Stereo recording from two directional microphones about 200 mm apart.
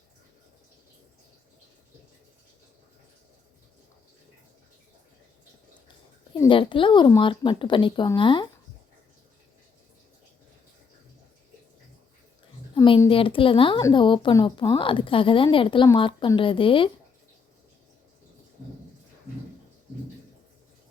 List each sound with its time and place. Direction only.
6.4 s speech: 25° left (ahead or behind)
12.7 s speech: 25° left (ahead or behind)